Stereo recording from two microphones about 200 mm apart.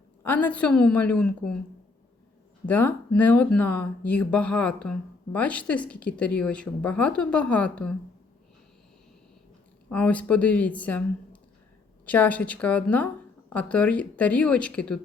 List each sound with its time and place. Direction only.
0.2 s speech: 10° left (ahead or behind)
2.6 s speech: 10° left (ahead or behind)
9.9 s speech: 5° left (ahead or behind)